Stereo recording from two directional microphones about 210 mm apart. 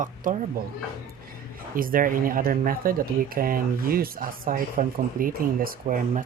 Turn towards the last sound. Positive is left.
turn(degrees=-40)  # may be behind; listen again after turning